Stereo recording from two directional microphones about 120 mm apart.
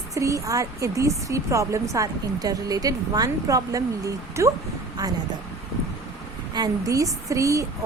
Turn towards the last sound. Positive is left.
turn(degrees=-25)  # may be behind; listen again after turning